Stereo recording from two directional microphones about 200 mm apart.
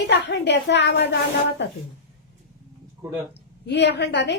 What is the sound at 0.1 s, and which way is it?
Speech, 60° left (ahead or behind).